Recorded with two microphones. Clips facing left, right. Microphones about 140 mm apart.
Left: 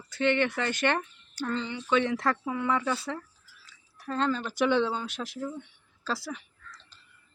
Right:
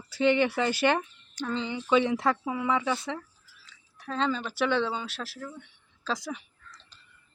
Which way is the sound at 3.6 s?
10° left (ahead or behind).